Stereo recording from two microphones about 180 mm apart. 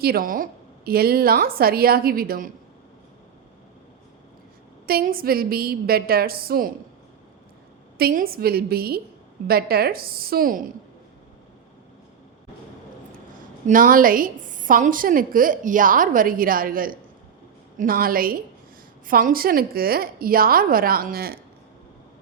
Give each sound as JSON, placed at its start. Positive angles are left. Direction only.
{"t": 0.0, "sound": "a woman's voice", "side_deg": -55}
{"t": 4.9, "sound": "a woman's voice", "side_deg": -55}
{"t": 7.9, "sound": "a woman's voice", "side_deg": -55}
{"t": 13.7, "sound": "a woman's voice", "side_deg": -50}